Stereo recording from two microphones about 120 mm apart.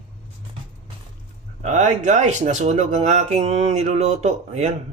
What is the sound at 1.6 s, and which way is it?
Speech, 90° right.